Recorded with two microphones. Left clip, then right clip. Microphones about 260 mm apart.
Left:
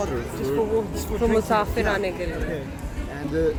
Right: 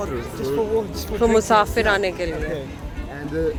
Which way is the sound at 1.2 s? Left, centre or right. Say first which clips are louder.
Right 5 dB; right.